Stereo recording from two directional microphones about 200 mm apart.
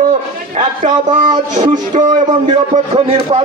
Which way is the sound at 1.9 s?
35° right (ahead or behind).